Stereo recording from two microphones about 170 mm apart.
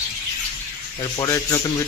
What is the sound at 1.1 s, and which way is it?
Speech, 20° left (ahead or behind).